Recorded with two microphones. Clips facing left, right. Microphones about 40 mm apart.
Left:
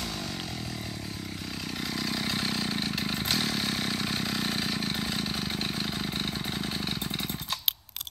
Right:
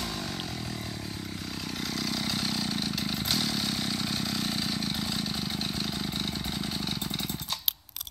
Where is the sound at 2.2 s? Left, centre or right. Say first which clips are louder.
Left 1 dB; left.